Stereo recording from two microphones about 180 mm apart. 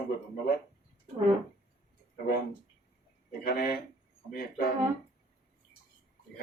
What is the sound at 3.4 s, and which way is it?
Speech, 55° left (ahead or behind).